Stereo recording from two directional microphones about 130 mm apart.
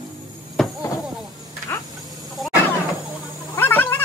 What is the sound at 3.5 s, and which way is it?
Cat, 15° left (ahead or behind).